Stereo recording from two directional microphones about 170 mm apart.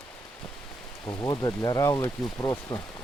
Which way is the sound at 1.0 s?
25° left (ahead or behind).